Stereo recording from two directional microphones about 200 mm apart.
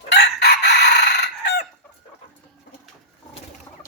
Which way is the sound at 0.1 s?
55° left (ahead or behind).